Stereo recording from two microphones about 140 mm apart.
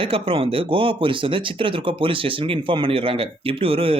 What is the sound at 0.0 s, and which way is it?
Speech, 40° right (ahead or behind).